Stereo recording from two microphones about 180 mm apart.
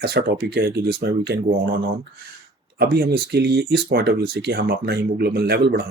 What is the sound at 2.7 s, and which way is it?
Speech, 60° right (ahead or behind).